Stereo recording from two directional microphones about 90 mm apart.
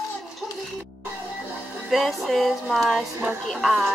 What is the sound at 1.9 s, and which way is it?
Speech, centre (ahead or behind).